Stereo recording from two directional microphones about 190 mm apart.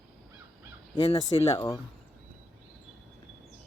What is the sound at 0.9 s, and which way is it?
Speech, 30° left (ahead or behind).